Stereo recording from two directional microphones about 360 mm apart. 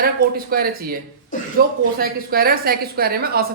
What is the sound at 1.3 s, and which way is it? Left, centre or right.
Speech, left.